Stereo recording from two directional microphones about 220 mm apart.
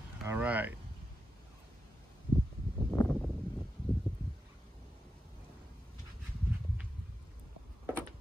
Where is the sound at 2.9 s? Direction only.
5° left (ahead or behind).